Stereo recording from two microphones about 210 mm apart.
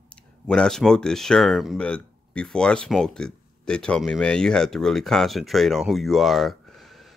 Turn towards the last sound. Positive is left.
turn(degrees=0)  # may be behind; listen again after turning